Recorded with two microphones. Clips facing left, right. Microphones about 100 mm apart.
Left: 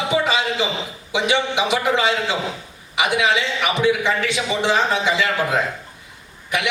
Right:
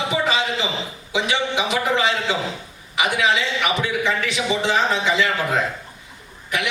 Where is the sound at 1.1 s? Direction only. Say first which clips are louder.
Left 2 dB; 20° left (ahead or behind).